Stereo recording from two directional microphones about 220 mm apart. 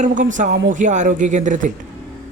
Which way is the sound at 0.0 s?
35° right (ahead or behind).